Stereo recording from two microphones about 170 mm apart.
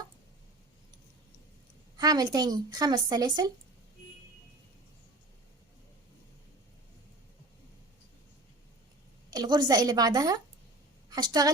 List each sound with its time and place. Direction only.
2.0 s speech: 20° right (ahead or behind)
9.3 s speech: 25° right (ahead or behind)